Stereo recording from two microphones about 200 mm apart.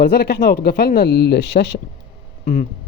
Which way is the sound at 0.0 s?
50° left (ahead or behind).